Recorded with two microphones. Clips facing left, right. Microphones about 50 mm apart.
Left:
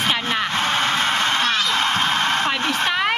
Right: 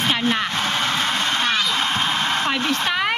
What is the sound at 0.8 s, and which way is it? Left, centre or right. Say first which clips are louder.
Honk: left 2 dB; left.